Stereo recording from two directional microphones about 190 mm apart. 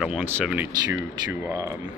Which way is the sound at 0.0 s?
5° right (ahead or behind).